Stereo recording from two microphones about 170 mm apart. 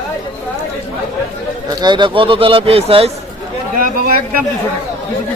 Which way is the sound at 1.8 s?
25° right (ahead or behind).